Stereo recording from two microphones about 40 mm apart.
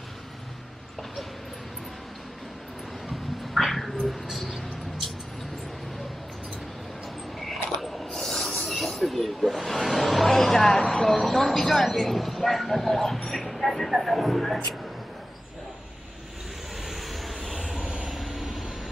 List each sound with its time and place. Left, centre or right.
3.1 s a sound: centre
7.3 s a sound: centre
8.8 s speech: centre
16.8 s vehicle: centre
17.8 s vehicle: centre
18.1 s vehicle: centre